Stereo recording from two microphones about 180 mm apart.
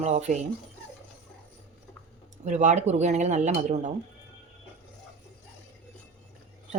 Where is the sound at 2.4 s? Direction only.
40° right (ahead or behind).